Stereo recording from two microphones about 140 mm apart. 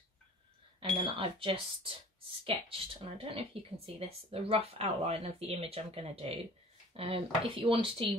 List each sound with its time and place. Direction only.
0.7 s speech: 40° right (ahead or behind)